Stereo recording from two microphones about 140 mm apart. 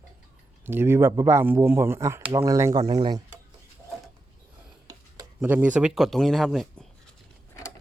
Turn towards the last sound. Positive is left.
turn(degrees=0)  # may be behind; listen again after turning